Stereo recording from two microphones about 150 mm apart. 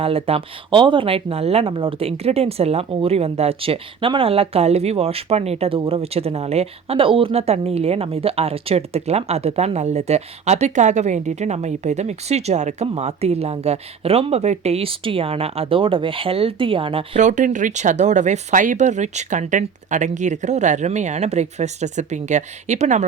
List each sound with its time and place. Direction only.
0.0 s a woman's voice: 40° right (ahead or behind)
17.2 s speech: 55° right (ahead or behind)